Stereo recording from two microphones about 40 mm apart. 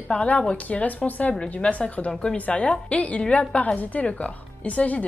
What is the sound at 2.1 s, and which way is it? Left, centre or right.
Speech, centre.